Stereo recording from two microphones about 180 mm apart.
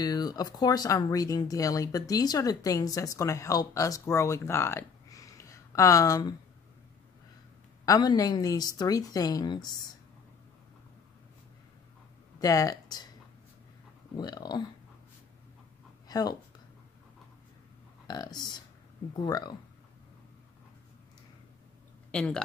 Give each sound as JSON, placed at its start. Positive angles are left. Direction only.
{"t": 0.0, "sound": "speech", "side_deg": 20}
{"t": 7.8, "sound": "speech", "side_deg": 20}
{"t": 12.4, "sound": "speech", "side_deg": 20}
{"t": 14.1, "sound": "speech", "side_deg": 20}
{"t": 16.1, "sound": "speech", "side_deg": 20}
{"t": 18.0, "sound": "speech", "side_deg": 20}
{"t": 22.1, "sound": "speech", "side_deg": 5}